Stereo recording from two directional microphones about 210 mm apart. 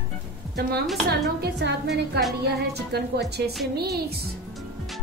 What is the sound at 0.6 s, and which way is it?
Speech, 50° right (ahead or behind).